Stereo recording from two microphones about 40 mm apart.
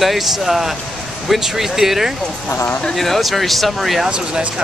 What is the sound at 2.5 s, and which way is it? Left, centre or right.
Speech, left.